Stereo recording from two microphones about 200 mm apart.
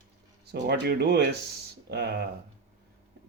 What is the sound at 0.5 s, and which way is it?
Speech, 55° right (ahead or behind).